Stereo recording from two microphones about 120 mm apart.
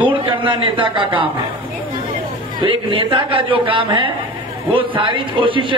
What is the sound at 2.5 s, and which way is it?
Speech, 45° right (ahead or behind).